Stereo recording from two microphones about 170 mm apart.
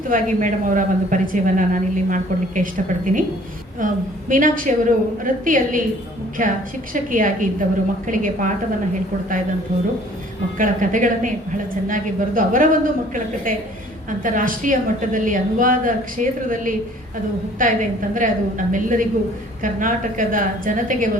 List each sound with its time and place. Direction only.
0.1 s a woman's voice: 50° right (ahead or behind)
10.6 s a woman's voice: 50° right (ahead or behind)